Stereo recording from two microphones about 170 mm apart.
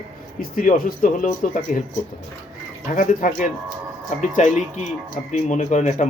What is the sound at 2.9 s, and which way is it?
Speech, 50° left (ahead or behind).